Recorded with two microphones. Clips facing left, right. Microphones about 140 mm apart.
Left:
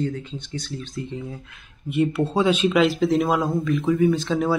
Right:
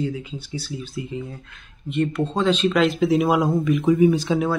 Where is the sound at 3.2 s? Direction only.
15° right (ahead or behind).